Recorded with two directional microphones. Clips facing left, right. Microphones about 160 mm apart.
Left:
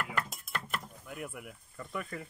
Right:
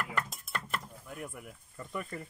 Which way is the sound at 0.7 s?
5° left (ahead or behind).